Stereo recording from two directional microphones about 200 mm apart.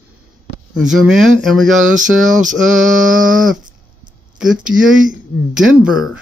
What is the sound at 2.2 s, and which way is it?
Mantra, 40° right (ahead or behind).